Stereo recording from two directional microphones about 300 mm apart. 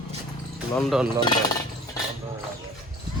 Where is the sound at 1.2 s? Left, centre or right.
Centre.